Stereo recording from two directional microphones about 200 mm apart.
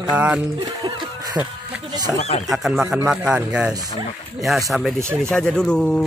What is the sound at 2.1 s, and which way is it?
Speech, 30° left (ahead or behind).